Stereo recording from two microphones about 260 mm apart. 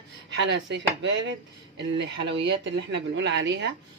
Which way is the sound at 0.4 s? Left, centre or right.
Right.